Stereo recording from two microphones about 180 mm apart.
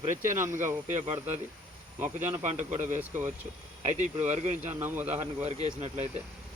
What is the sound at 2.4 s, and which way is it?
Speech, 40° right (ahead or behind).